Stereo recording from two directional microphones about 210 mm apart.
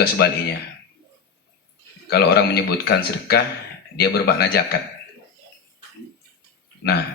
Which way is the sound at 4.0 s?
50° left (ahead or behind).